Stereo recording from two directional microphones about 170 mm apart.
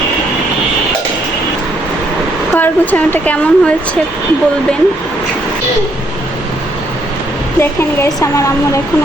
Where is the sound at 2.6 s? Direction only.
10° left (ahead or behind).